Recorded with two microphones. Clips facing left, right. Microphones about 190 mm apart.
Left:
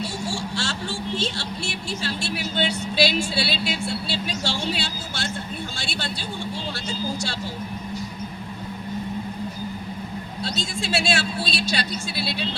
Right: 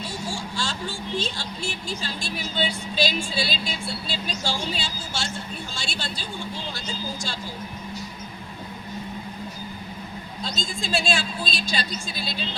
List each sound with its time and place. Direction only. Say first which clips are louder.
0.0 s speech: left 3 dB; 75° left (ahead or behind)
10.4 s speech: left 2 dB; 70° left (ahead or behind)